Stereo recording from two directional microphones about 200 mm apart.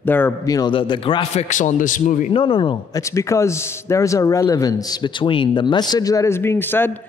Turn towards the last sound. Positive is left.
turn(degrees=10)  # may be behind; listen again after turning